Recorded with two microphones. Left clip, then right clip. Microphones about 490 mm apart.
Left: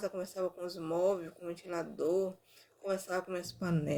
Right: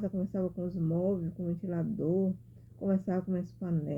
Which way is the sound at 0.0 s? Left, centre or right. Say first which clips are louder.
Right 1 dB; centre.